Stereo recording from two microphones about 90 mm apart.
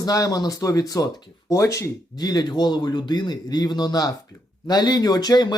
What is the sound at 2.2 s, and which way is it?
Speech, 50° left (ahead or behind).